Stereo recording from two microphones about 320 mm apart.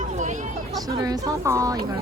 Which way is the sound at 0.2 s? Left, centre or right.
Right.